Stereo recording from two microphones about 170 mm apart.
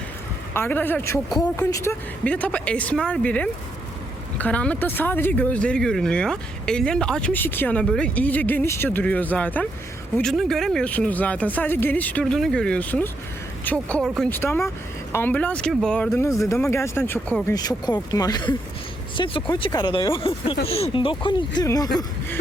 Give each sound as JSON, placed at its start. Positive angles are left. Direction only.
{"t": 0.5, "sound": "speech", "side_deg": 10}